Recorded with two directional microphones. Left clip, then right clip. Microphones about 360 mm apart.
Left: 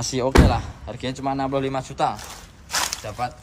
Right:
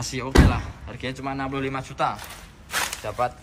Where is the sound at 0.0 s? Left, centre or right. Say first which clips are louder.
Left 3 dB; centre.